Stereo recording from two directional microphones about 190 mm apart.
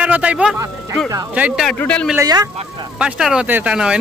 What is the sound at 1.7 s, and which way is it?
Speech, 5° left (ahead or behind).